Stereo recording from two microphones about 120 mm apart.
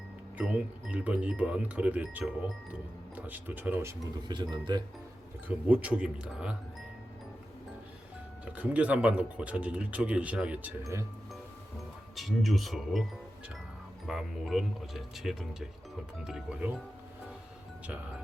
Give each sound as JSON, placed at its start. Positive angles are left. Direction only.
{"t": 0.3, "sound": "speech", "side_deg": -10}
{"t": 4.3, "sound": "speech", "side_deg": -35}
{"t": 5.5, "sound": "speech", "side_deg": -10}
{"t": 8.5, "sound": "speech", "side_deg": -10}
{"t": 12.1, "sound": "speech", "side_deg": 0}
{"t": 14.1, "sound": "speech", "side_deg": -5}